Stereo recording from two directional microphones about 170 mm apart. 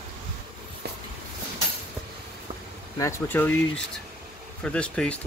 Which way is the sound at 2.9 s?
15° left (ahead or behind).